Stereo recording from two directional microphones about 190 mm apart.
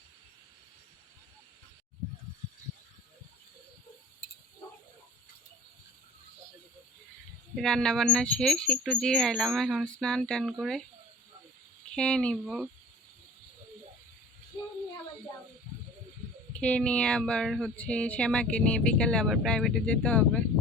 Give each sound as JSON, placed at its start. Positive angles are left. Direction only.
{"t": 7.5, "sound": "speech", "side_deg": 5}
{"t": 11.9, "sound": "speech", "side_deg": 5}
{"t": 16.5, "sound": "speech", "side_deg": 5}